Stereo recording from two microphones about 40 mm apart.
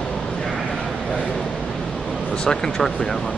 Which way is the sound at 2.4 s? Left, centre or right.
Centre.